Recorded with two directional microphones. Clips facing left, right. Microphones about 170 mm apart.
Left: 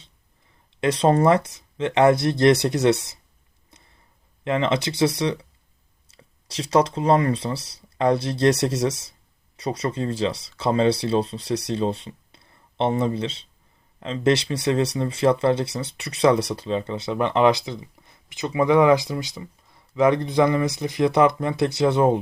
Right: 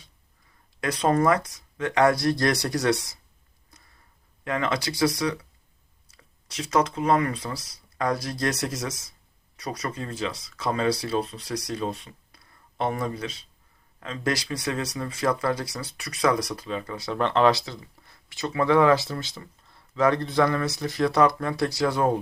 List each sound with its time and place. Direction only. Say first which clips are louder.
0.8 s speech: left 4 dB; 30° left (ahead or behind)
3.7 s a sound: left 2 dB; 25° left (ahead or behind)
4.4 s speech: left 5 dB; 25° left (ahead or behind)